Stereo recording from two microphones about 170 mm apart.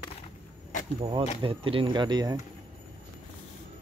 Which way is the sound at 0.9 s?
35° right (ahead or behind).